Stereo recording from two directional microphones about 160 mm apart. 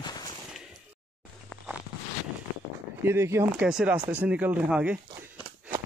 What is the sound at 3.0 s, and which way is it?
Speech, 15° right (ahead or behind).